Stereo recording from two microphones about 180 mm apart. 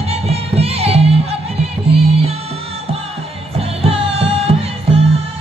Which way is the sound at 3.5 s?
35° right (ahead or behind).